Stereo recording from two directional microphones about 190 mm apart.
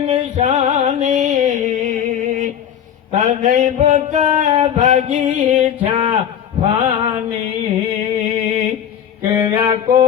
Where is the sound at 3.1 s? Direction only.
35° right (ahead or behind).